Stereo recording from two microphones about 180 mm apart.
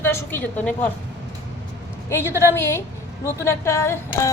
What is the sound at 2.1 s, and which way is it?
A woman's voice, 15° left (ahead or behind).